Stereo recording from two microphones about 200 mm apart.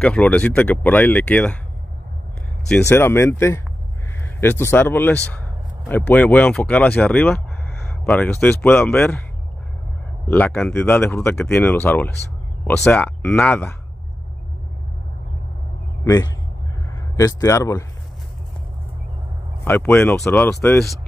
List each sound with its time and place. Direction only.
0.0 s speech: 5° left (ahead or behind)
2.7 s speech: 10° left (ahead or behind)
10.2 s speech: 10° left (ahead or behind)
16.0 s a man's voice: 10° left (ahead or behind)
19.6 s speech: 10° left (ahead or behind)